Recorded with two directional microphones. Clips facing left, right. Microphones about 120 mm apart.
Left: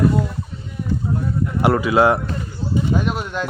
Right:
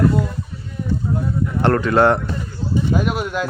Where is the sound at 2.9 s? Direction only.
5° right (ahead or behind).